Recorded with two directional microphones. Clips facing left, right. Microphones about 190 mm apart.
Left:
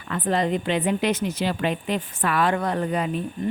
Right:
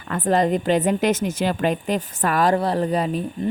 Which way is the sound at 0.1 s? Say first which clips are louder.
Right 4 dB; 45° right (ahead or behind).